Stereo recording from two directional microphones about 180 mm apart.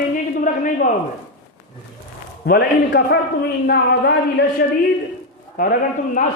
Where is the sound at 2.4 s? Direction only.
60° left (ahead or behind).